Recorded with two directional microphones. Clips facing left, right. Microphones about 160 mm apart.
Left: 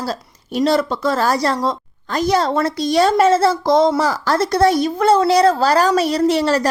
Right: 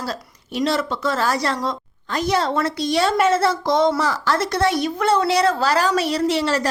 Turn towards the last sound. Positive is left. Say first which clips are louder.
# left 4 dB
turn(degrees=40)  # may be behind; listen again after turning